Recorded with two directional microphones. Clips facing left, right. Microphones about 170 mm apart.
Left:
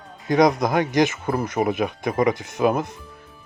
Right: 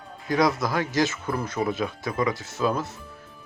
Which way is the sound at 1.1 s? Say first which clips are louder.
Left 4 dB; 50° left (ahead or behind).